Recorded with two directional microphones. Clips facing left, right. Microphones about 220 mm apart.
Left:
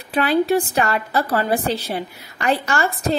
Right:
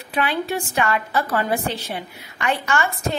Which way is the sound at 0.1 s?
35° left (ahead or behind).